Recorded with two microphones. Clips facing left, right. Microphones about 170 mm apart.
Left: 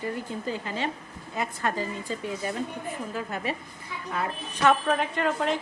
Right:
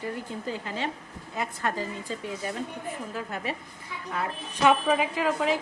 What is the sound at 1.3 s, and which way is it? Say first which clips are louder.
Speech: left 1 dB; 5° left (ahead or behind).